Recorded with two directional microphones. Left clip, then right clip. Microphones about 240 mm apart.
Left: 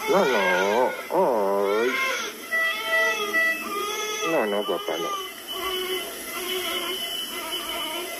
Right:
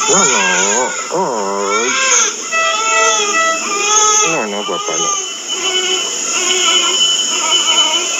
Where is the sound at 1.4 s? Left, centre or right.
Right.